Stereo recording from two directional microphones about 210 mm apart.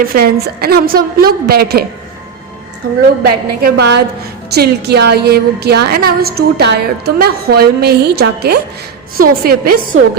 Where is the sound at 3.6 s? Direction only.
50° right (ahead or behind).